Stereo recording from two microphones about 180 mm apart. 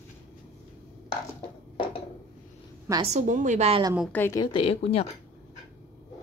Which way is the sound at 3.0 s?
40° right (ahead or behind).